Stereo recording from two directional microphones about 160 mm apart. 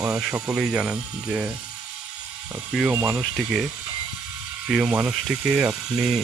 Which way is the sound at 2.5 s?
5° right (ahead or behind).